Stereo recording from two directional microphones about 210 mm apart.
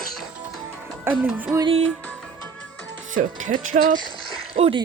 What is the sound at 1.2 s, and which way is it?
Speech, 10° right (ahead or behind).